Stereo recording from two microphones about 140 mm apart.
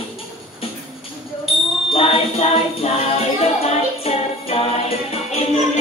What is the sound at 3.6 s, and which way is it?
Music, 45° left (ahead or behind).